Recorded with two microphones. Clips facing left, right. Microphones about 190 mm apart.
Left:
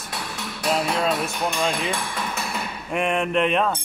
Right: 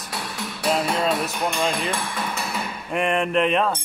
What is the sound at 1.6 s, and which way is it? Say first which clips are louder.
Speech: even; centre (ahead or behind).